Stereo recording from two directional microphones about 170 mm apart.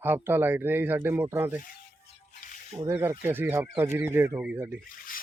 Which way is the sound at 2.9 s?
15° right (ahead or behind).